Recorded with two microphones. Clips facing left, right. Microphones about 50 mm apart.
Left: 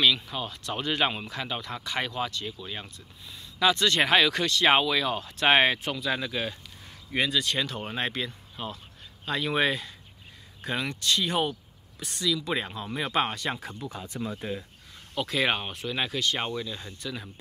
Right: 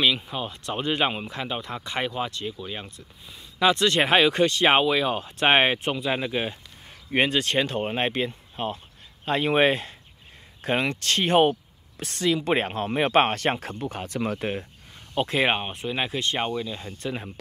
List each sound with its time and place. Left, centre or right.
0.0 s speech: right
7.2 s speech: right
7.5 s speech: right
11.0 s speech: right
14.0 s speech: right
15.1 s speech: right
16.3 s speech: centre
17.0 s speech: right